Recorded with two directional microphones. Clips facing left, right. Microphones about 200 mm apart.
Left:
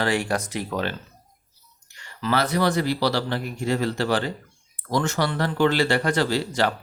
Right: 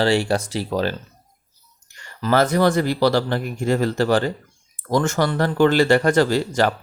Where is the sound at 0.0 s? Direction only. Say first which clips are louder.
Right 5 dB; 30° right (ahead or behind).